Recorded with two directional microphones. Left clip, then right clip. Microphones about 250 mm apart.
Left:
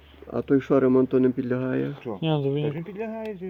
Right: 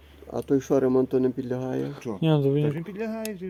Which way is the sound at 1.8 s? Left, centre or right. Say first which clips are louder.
Even; right.